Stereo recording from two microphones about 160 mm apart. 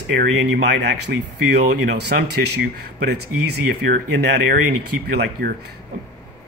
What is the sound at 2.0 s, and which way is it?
Speech, 90° right.